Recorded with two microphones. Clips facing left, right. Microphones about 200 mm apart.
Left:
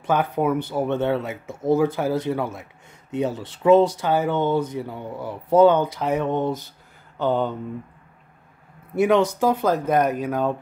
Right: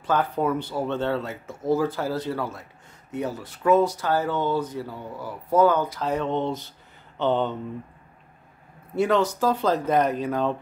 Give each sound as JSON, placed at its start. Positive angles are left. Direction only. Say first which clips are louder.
{"t": 0.0, "sound": "speech", "louder": "left 2 dB", "side_deg": 15}
{"t": 8.9, "sound": "speech", "louder": "left 3 dB", "side_deg": 15}